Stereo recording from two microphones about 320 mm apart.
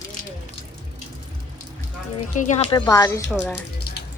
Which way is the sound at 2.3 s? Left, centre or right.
Left.